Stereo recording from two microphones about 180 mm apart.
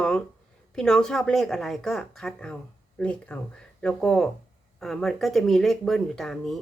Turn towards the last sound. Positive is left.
turn(degrees=0)  # may be behind; listen again after turning